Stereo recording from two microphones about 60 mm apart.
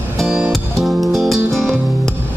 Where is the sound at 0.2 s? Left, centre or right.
Centre.